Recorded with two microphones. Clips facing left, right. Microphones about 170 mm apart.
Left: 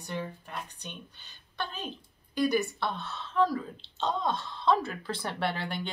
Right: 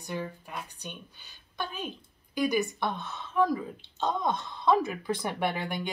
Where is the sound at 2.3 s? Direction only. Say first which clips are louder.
Even; 10° right (ahead or behind).